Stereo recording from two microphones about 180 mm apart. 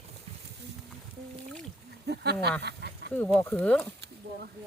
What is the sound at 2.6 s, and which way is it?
Duck, 65° right (ahead or behind).